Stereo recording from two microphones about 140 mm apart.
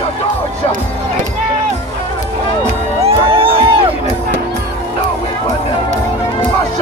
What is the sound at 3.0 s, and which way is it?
Music, 40° right (ahead or behind).